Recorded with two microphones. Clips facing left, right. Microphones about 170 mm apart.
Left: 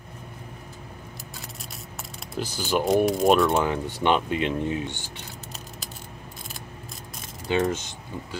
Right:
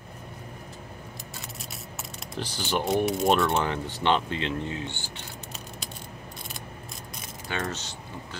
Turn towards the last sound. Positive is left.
turn(degrees=15)  # may be behind; listen again after turning